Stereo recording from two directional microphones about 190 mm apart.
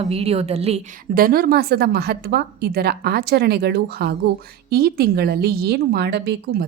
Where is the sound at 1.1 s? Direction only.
50° right (ahead or behind).